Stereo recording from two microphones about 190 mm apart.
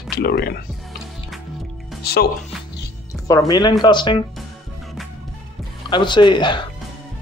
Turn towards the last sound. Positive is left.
turn(degrees=25)  # may be behind; listen again after turning